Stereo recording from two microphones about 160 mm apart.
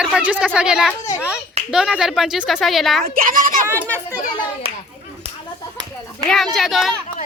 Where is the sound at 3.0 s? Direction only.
60° right (ahead or behind).